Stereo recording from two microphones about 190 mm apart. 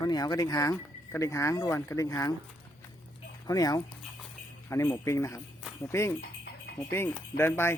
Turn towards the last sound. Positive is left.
turn(degrees=10)  # may be behind; listen again after turning